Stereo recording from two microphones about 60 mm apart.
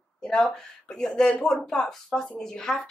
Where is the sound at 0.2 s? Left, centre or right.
Centre.